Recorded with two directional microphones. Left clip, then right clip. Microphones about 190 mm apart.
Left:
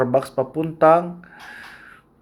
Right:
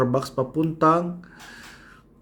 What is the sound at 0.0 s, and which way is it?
Speech, 20° right (ahead or behind).